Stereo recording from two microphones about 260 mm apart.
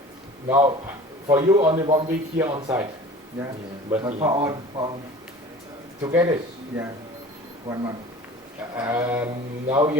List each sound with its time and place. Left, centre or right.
0.4 s a man's voice: centre
3.8 s speech: centre
6.0 s speech: centre
7.7 s a man's voice: right